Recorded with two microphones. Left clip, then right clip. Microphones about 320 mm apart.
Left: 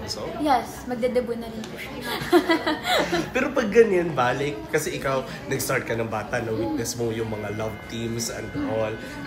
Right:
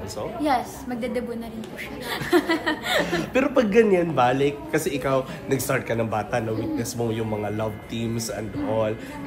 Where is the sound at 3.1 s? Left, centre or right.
Right.